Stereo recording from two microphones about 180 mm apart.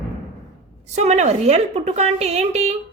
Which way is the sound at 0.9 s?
40° right (ahead or behind).